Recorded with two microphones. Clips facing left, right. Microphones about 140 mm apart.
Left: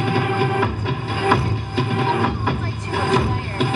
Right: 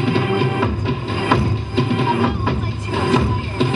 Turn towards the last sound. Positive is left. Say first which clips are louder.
# right 2 dB
turn(degrees=-20)  # may be behind; listen again after turning